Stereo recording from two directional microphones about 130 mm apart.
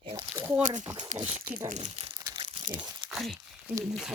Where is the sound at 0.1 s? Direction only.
25° right (ahead or behind).